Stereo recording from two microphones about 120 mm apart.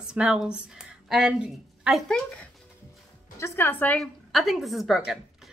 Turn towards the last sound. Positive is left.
turn(degrees=0)  # may be behind; listen again after turning